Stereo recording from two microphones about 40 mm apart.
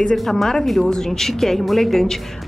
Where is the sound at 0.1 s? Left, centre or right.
Centre.